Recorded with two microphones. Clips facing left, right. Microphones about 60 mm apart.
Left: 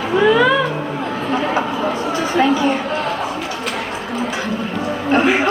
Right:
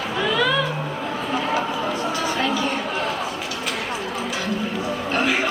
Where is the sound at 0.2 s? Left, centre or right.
Left.